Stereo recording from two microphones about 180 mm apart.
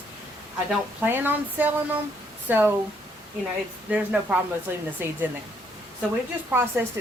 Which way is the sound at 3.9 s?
5° right (ahead or behind).